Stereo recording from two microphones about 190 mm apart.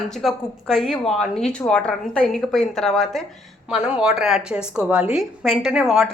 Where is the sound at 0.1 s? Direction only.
Centre (ahead or behind).